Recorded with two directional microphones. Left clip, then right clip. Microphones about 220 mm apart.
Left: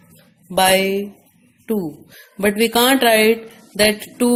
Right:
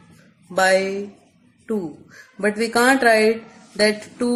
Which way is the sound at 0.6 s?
55° left (ahead or behind).